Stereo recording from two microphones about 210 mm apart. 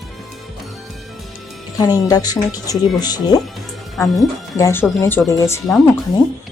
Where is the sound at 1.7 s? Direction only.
15° left (ahead or behind).